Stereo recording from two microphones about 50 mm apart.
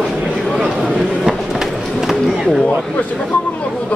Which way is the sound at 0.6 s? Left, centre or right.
Centre.